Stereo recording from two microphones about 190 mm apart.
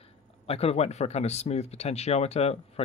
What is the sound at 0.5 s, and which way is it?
Speech, 30° left (ahead or behind).